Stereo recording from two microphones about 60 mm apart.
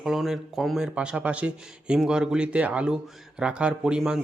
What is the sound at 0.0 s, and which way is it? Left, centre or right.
Speech, centre.